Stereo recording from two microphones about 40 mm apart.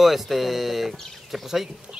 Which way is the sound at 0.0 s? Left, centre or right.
Centre.